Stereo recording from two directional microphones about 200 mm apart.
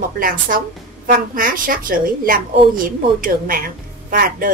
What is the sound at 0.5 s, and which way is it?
A woman's voice, 45° right (ahead or behind).